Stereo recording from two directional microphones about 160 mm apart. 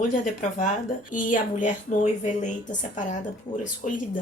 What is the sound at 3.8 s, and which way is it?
Speech, 50° left (ahead or behind).